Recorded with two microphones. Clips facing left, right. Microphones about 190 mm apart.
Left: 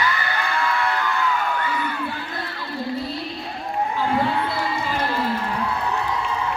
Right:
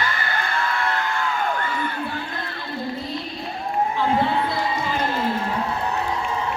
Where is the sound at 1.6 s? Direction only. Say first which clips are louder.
Left 1 dB; 45° right (ahead or behind).